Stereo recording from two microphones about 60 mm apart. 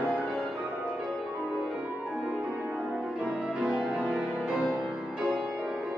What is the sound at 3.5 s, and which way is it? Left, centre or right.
Music, centre.